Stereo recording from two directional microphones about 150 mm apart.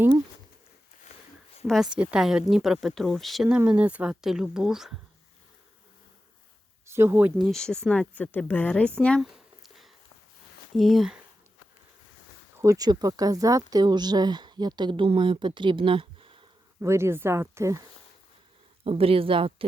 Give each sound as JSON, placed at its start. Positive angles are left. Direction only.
{"t": 1.6, "sound": "a woman's voice", "side_deg": 0}
{"t": 6.8, "sound": "speech", "side_deg": -15}
{"t": 7.3, "sound": "a woman's voice", "side_deg": 0}
{"t": 9.3, "sound": "a sound", "side_deg": 0}
{"t": 10.8, "sound": "a woman's voice", "side_deg": 0}
{"t": 12.5, "sound": "speech", "side_deg": -20}
{"t": 16.8, "sound": "speech", "side_deg": -15}
{"t": 18.9, "sound": "speech", "side_deg": -40}